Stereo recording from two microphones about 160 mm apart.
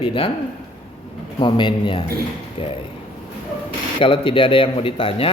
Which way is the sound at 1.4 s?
30° left (ahead or behind).